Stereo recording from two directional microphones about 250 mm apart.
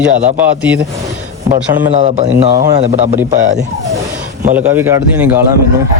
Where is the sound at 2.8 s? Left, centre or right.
Right.